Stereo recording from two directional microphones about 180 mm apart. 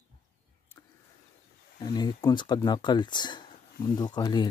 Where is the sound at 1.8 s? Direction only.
25° left (ahead or behind).